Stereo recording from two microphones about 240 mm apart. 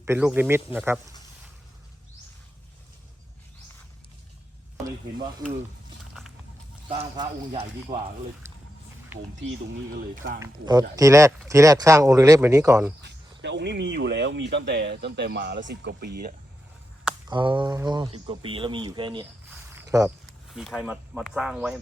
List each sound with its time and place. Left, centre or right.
0.0 s speech: centre
6.8 s speech: right
8.4 s a sound: centre
9.1 s speech: centre
9.9 s speech: right
10.4 s speech: centre
13.4 s speech: right
17.2 s speech: centre
19.7 s a sound: centre
20.1 s speech: centre